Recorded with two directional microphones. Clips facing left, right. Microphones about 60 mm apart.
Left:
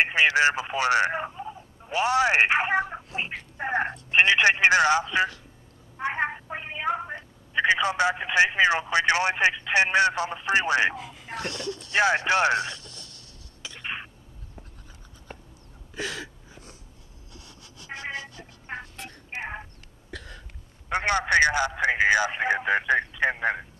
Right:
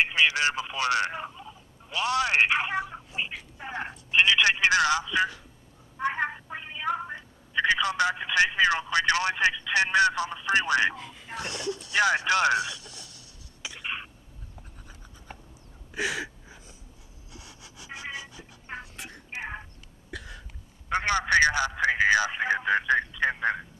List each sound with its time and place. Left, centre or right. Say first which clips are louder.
0.0 s a woman's voice: left 3 dB; left
11.0 s speech: left 3 dB; centre
11.3 s speech: even; centre
11.9 s a man's voice: left 2 dB; left
12.7 s a sound: left 1 dB; centre
13.8 s a sound: left 1 dB; centre
15.9 s a sound: right 3 dB; centre
20.1 s cough: even; centre
20.9 s a man's voice: left 1 dB; centre